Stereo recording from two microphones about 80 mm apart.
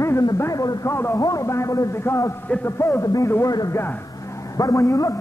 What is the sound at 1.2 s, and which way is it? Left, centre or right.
A man's voice, left.